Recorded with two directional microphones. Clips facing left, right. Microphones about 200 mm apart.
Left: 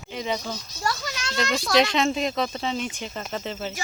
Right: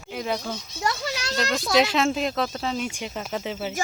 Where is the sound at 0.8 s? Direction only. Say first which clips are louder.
Right 2 dB; 30° right (ahead or behind).